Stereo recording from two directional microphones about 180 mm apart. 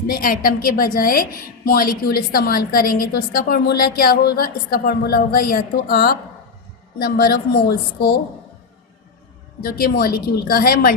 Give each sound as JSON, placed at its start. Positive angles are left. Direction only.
{"t": 0.1, "sound": "a woman's voice", "side_deg": 50}
{"t": 9.6, "sound": "a woman's voice", "side_deg": 55}